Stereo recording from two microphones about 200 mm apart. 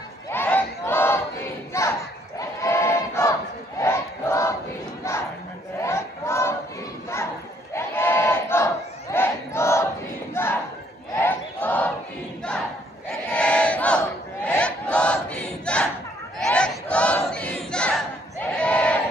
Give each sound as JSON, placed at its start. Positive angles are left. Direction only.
{"t": 0.3, "sound": "battle cry", "side_deg": 10}
{"t": 5.1, "sound": "crowd", "side_deg": 15}
{"t": 5.8, "sound": "battle cry", "side_deg": 15}
{"t": 7.7, "sound": "battle cry", "side_deg": 10}
{"t": 11.1, "sound": "a sound", "side_deg": 10}
{"t": 13.3, "sound": "battle cry", "side_deg": 5}